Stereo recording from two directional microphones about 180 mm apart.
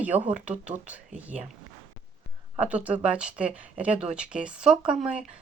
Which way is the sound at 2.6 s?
10° right (ahead or behind).